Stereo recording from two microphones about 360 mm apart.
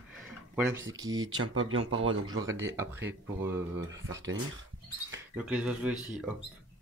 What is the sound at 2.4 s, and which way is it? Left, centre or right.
Speech, centre.